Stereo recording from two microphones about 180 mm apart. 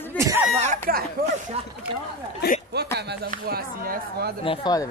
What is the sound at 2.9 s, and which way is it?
Speech, 65° right (ahead or behind).